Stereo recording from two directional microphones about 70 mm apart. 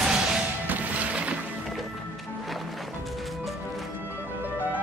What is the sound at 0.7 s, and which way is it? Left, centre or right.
Music, right.